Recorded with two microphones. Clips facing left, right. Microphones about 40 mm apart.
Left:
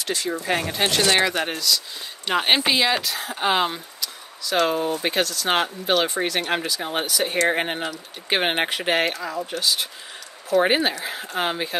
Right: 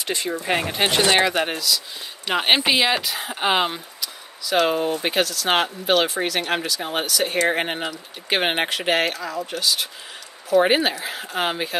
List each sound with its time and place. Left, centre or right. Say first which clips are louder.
0.0 s speech: even; right; by 7.1 s centre
7.1 s speech: right 1 dB; centre
7.3 s speech: even; centre